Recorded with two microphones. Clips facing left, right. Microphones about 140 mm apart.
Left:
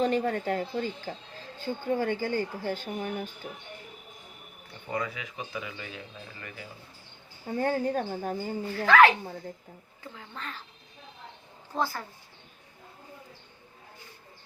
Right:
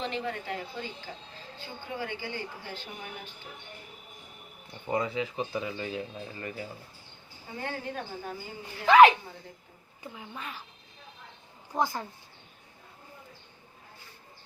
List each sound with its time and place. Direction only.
0.0 s speech: 45° left (ahead or behind)
4.9 s a man's voice: 25° right (ahead or behind)
7.4 s speech: 45° left (ahead or behind)
8.7 s speech: 20° right (ahead or behind)
11.7 s speech: 15° right (ahead or behind)